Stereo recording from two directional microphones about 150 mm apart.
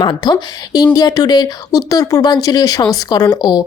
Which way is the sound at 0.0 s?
30° left (ahead or behind).